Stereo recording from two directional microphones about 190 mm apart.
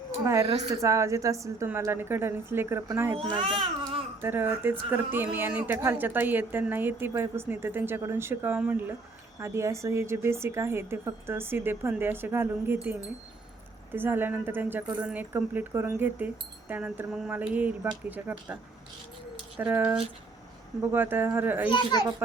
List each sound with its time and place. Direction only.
0.5 s a woman's voice: 15° right (ahead or behind)
3.2 s a child's voice: 25° right (ahead or behind)
4.2 s a woman's voice: 10° right (ahead or behind)
19.5 s a woman's voice: 10° right (ahead or behind)